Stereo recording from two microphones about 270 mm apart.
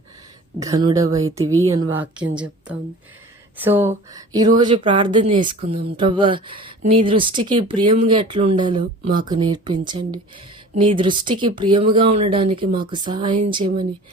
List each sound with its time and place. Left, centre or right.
0.6 s a woman's voice: centre